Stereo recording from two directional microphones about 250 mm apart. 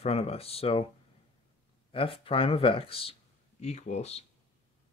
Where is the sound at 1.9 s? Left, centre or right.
Left.